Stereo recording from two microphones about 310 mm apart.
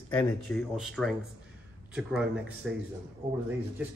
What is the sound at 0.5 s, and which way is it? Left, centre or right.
Speech, centre.